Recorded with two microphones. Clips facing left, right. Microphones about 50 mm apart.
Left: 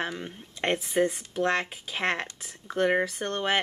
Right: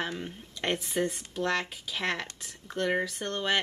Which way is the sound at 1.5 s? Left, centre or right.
Left.